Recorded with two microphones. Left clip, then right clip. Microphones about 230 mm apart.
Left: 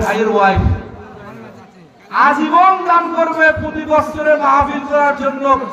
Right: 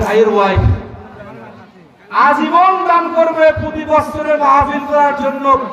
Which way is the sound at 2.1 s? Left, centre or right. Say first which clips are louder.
Right 1 dB; right.